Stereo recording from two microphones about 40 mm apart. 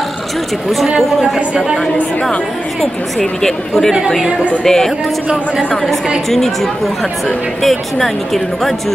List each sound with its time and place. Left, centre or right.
0.8 s a woman's voice: centre
2.8 s speech: centre
6.3 s speech: centre